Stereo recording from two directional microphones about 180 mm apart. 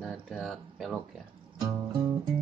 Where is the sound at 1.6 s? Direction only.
20° right (ahead or behind).